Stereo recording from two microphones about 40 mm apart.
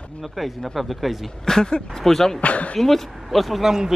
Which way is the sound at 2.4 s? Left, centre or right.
Left.